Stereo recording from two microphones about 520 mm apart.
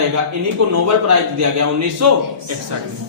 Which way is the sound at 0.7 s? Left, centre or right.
Right.